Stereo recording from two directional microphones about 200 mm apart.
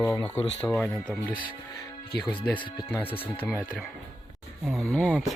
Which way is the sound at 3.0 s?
25° left (ahead or behind).